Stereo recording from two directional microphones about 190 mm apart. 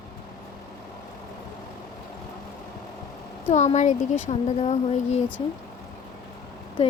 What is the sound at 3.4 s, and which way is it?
A woman's voice, 40° left (ahead or behind).